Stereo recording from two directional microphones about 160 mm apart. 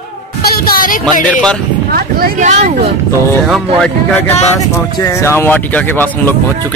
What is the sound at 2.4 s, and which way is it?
Speech, 50° right (ahead or behind).